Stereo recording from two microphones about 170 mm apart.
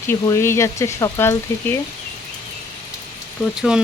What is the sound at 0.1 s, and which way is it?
Speech, 15° left (ahead or behind).